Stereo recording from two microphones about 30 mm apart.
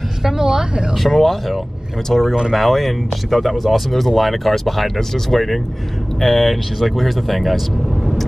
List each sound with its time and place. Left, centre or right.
0.2 s a woman's voice: centre
0.9 s speech: centre